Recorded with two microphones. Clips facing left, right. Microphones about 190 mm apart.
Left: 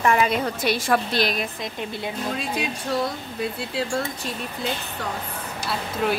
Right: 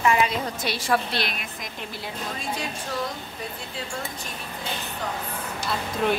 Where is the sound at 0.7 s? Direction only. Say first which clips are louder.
Left 3 dB; 45° left (ahead or behind).